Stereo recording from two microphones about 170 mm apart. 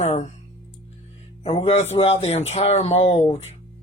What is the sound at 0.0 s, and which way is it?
Speech, 40° left (ahead or behind).